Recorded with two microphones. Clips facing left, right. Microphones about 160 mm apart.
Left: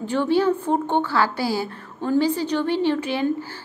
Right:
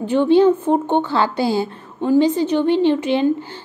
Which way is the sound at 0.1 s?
20° right (ahead or behind).